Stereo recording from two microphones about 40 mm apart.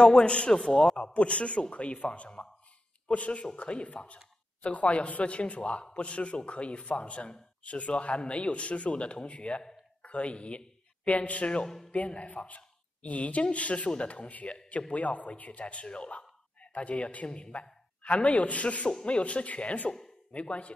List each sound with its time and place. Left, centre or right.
0.0 s a man's voice: left
1.1 s a man's voice: left
11.6 s a man's voice: centre
11.9 s a woman's voice: left